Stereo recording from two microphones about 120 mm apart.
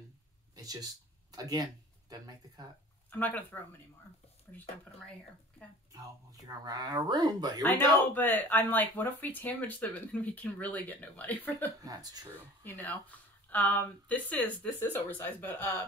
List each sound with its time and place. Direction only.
0.6 s speech: 30° right (ahead or behind)
3.1 s speech: 15° left (ahead or behind)
5.9 s speech: 30° right (ahead or behind)
7.6 s speech: 15° left (ahead or behind)
11.8 s speech: 30° right (ahead or behind)
12.6 s speech: 15° left (ahead or behind)